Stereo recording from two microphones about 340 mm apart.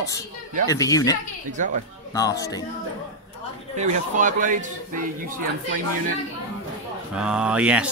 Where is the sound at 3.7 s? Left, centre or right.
Right.